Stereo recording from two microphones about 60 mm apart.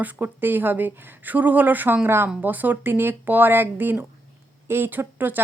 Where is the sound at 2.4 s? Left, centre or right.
Right.